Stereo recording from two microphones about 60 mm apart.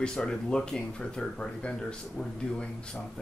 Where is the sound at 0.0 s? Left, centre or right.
Centre.